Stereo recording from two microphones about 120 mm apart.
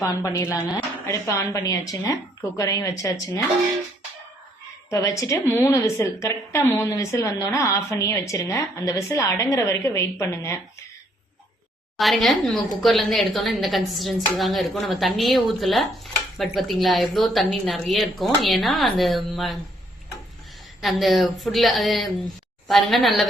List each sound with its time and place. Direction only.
0.0 s a woman's voice: 25° left (ahead or behind)
4.9 s a woman's voice: 25° left (ahead or behind)
11.9 s speech: centre (ahead or behind)
20.8 s speech: centre (ahead or behind)